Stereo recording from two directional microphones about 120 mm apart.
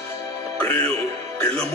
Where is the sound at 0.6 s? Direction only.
15° left (ahead or behind).